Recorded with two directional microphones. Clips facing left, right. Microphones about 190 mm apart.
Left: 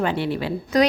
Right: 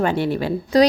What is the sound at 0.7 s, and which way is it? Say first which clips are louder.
Speech: right 4 dB; 30° right (ahead or behind).